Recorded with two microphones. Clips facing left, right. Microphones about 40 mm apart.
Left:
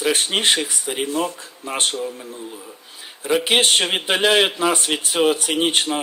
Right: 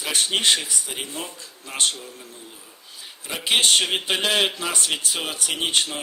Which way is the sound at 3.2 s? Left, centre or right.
Left.